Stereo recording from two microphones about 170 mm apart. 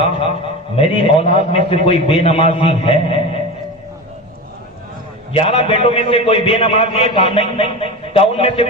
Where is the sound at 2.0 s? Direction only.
35° left (ahead or behind).